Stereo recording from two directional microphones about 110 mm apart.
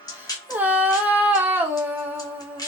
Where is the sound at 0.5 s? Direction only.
15° right (ahead or behind).